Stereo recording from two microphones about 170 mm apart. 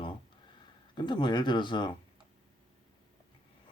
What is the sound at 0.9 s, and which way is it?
A man's voice, 25° left (ahead or behind).